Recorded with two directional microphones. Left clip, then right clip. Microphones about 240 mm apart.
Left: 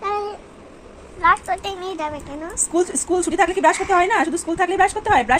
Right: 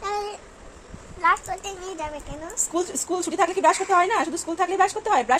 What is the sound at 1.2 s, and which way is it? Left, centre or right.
A child's voice, centre.